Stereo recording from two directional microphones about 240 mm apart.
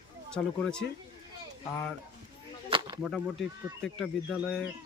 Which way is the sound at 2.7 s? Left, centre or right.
Centre.